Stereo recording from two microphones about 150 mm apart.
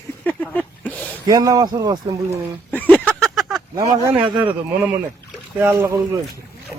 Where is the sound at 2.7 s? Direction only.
10° left (ahead or behind).